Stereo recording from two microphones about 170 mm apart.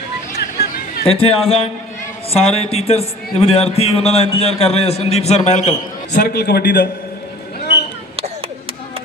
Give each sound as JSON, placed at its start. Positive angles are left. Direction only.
{"t": 1.0, "sound": "a man's voice", "side_deg": 35}
{"t": 6.2, "sound": "a man's voice", "side_deg": 70}